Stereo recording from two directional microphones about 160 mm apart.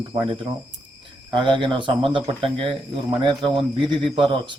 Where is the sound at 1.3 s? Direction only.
30° right (ahead or behind).